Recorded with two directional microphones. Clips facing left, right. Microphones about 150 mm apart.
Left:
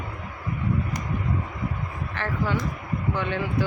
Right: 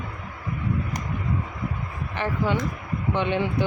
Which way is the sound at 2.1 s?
15° right (ahead or behind).